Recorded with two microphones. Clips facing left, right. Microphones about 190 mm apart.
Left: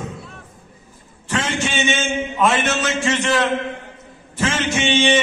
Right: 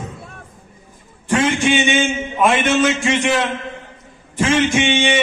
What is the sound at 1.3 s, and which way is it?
A man's voice, 15° right (ahead or behind).